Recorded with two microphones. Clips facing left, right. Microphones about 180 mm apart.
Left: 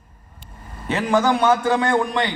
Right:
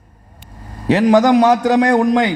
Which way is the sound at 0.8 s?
35° right (ahead or behind).